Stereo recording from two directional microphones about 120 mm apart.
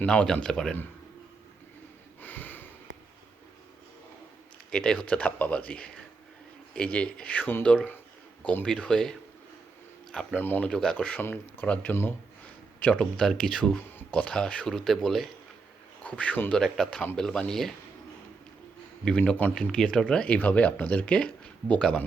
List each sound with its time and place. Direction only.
0.0 s speech: 10° left (ahead or behind)
2.2 s sniff: 15° left (ahead or behind)
4.7 s speech: 5° left (ahead or behind)
19.0 s speech: 10° left (ahead or behind)